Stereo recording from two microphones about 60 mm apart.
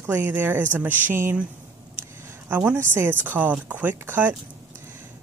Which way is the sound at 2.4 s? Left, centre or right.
Right.